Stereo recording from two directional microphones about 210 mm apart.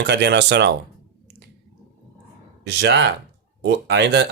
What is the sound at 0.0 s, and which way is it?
Speech, 55° right (ahead or behind).